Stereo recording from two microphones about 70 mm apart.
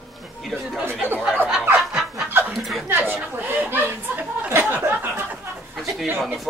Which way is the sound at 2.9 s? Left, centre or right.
Right.